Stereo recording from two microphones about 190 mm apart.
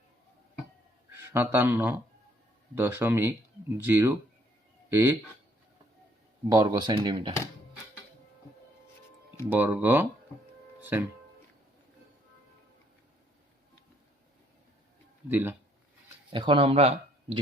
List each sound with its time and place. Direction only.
1.1 s speech: 10° right (ahead or behind)
6.5 s speech: 20° right (ahead or behind)
9.5 s speech: 10° right (ahead or behind)
10.8 s music: 10° right (ahead or behind)
15.3 s speech: 10° right (ahead or behind)
16.3 s speech: 25° right (ahead or behind)